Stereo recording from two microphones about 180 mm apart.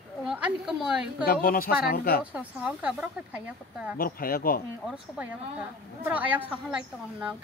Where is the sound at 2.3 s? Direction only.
10° right (ahead or behind).